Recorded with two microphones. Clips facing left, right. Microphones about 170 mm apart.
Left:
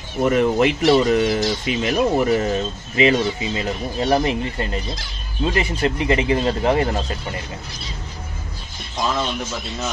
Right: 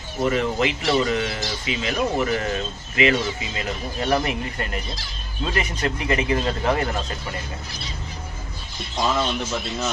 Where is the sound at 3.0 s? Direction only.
30° left (ahead or behind).